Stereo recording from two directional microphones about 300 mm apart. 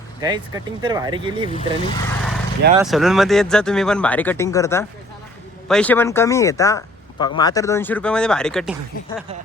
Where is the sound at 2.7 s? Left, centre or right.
Centre.